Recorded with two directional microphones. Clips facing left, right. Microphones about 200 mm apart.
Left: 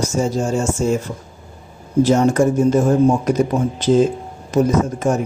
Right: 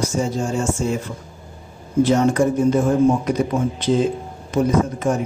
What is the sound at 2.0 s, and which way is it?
Speech, 45° left (ahead or behind).